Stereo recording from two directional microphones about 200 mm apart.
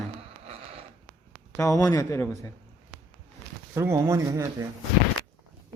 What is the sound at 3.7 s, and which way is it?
Speech, 15° right (ahead or behind).